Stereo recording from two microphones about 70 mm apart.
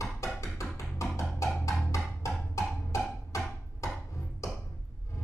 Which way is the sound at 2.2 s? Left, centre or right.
Left.